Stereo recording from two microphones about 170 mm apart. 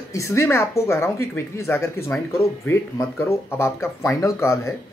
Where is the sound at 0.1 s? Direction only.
15° left (ahead or behind).